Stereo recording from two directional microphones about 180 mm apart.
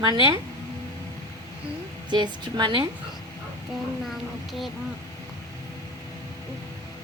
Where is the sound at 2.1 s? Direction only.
25° right (ahead or behind).